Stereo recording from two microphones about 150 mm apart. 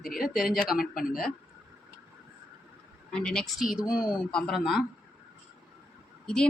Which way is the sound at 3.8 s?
25° left (ahead or behind).